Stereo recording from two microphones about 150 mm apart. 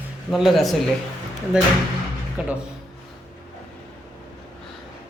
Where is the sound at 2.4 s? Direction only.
5° right (ahead or behind).